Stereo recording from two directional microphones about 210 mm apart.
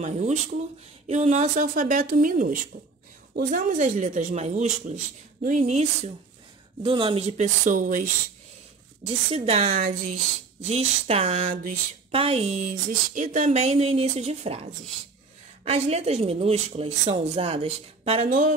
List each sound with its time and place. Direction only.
0.0 s speech: 35° right (ahead or behind)
9.0 s a woman's voice: 30° right (ahead or behind)